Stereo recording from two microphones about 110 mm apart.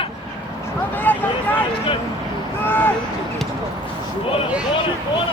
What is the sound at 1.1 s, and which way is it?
Vehicle, 15° left (ahead or behind).